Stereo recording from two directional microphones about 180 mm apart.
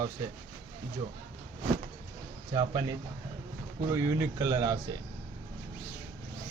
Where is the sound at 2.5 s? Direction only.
20° right (ahead or behind).